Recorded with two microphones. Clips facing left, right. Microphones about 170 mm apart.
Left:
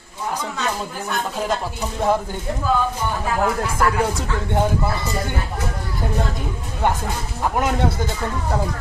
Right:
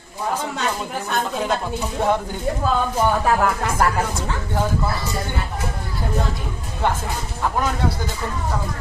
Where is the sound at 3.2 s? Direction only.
60° right (ahead or behind).